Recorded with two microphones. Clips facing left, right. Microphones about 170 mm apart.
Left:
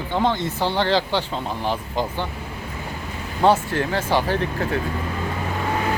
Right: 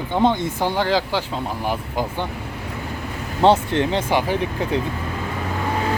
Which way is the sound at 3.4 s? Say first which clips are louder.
Right 2 dB; 25° right (ahead or behind).